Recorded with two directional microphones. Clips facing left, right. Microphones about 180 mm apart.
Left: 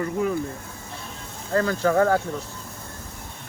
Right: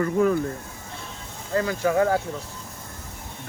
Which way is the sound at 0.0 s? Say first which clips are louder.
Right 4 dB; 50° right (ahead or behind).